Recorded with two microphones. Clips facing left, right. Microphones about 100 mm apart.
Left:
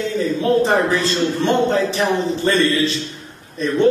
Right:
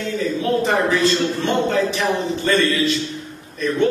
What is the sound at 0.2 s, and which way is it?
A man's voice, 30° left (ahead or behind).